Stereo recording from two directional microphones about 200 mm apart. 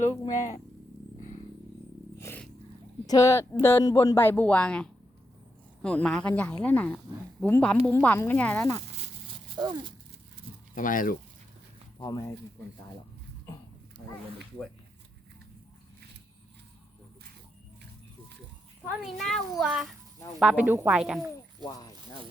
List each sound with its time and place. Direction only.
0.3 s speech: 35° left (ahead or behind)
2.1 s a sound: 10° left (ahead or behind)
3.1 s a child's voice: 15° left (ahead or behind)
9.6 s a sound: 20° right (ahead or behind)
10.8 s speech: 40° left (ahead or behind)
11.9 s speech: 20° left (ahead or behind)
18.9 s a child's voice: centre (ahead or behind)
21.6 s speech: 20° left (ahead or behind)